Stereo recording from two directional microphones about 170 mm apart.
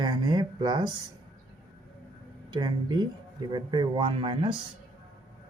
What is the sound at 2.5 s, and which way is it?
Speech, 25° right (ahead or behind).